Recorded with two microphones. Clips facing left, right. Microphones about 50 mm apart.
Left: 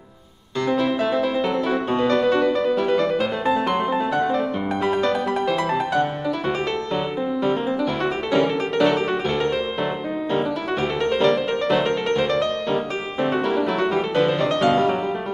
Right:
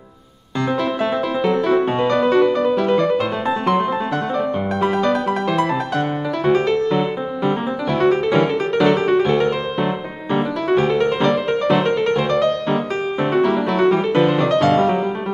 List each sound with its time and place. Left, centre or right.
0.7 s music: centre
1.8 s music: centre
2.0 s music: centre
6.9 s piano: centre
8.3 s piano: centre
8.7 s music: centre
14.1 s music: centre